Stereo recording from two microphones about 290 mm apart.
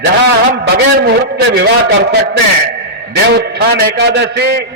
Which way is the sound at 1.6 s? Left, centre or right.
Right.